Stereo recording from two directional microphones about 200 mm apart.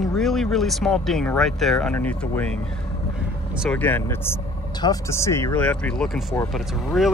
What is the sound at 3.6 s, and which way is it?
Speech, 10° left (ahead or behind).